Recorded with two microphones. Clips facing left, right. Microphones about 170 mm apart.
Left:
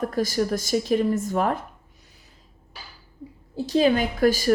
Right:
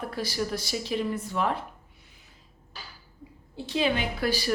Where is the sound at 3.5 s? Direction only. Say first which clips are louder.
Left 7 dB; 40° left (ahead or behind).